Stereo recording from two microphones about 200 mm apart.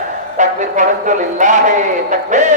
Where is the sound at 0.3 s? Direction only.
40° right (ahead or behind).